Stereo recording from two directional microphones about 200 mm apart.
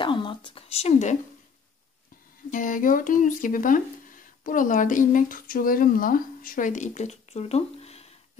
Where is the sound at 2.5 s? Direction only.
40° left (ahead or behind).